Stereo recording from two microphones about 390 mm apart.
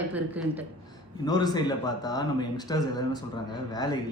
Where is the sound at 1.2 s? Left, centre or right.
Centre.